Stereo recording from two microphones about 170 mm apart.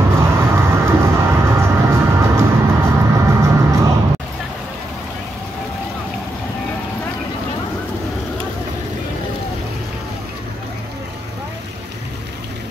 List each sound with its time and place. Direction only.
0.1 s vehicle: 15° right (ahead or behind)